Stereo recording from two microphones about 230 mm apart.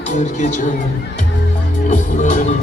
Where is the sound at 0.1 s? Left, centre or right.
Left.